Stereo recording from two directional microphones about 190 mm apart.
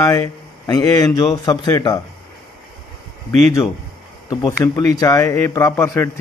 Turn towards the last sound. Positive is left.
turn(degrees=15)  # may be behind; listen again after turning